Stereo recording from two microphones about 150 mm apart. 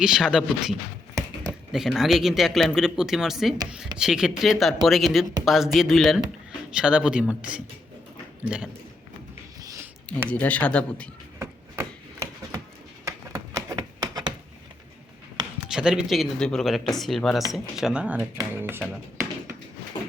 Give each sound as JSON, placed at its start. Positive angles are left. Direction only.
{"t": 0.0, "sound": "speech", "side_deg": -5}
{"t": 10.1, "sound": "speech", "side_deg": 10}
{"t": 11.3, "sound": "a sound", "side_deg": -20}
{"t": 15.7, "sound": "speech", "side_deg": -5}